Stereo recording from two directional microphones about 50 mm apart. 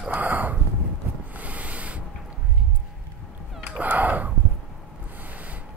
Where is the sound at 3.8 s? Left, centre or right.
Right.